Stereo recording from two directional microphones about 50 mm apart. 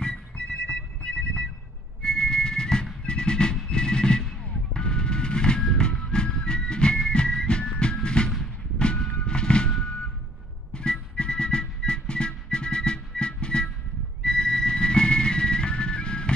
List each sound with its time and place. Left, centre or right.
0.0 s music: centre
3.1 s a sound: centre
5.6 s music: centre
8.7 s reversing beeps: centre
10.7 s music: centre